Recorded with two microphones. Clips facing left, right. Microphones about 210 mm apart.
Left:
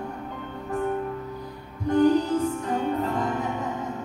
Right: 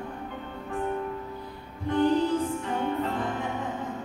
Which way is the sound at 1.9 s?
40° left (ahead or behind).